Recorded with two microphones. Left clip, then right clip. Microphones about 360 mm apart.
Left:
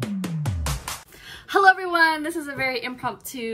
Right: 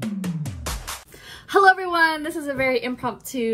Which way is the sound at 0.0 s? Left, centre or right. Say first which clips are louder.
Even; centre.